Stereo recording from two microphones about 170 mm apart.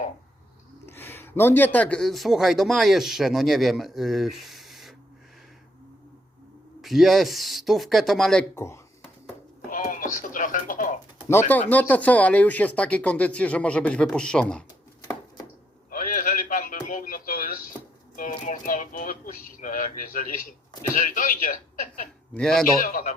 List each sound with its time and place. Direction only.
0.9 s speech: 10° left (ahead or behind)
6.8 s speech: centre (ahead or behind)
8.5 s speech: 15° left (ahead or behind)
9.6 s radio: 50° left (ahead or behind)
11.3 s speech: 10° left (ahead or behind)
15.9 s radio: 55° left (ahead or behind)
18.2 s a sound: 50° left (ahead or behind)
20.9 s a man's voice: 50° left (ahead or behind)
22.4 s speech: 5° left (ahead or behind)
22.8 s a man's voice: 50° left (ahead or behind)